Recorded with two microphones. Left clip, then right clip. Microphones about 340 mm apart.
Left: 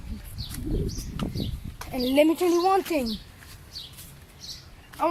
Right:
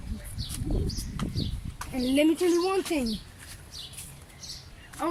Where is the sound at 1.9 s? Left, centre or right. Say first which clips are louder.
Left 3 dB; centre.